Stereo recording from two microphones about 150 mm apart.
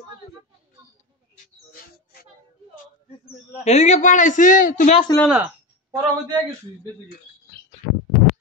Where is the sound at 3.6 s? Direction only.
50° left (ahead or behind).